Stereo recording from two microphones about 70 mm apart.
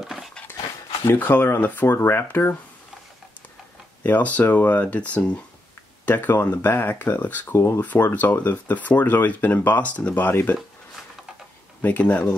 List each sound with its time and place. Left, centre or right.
0.0 s dog: centre
1.0 s speech: left
4.0 s speech: left
6.0 s speech: left
7.5 s speech: left
7.8 s speech: left
11.8 s speech: left